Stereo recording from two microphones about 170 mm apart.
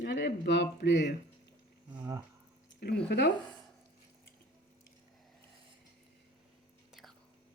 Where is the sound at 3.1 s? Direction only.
75° left (ahead or behind).